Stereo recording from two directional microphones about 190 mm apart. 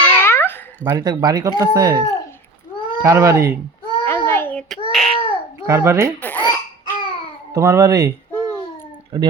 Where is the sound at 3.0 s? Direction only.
15° right (ahead or behind).